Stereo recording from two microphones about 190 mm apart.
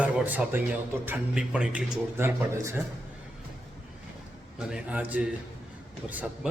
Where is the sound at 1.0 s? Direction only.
10° right (ahead or behind).